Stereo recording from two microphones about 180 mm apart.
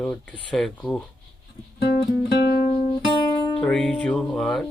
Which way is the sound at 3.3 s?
20° left (ahead or behind).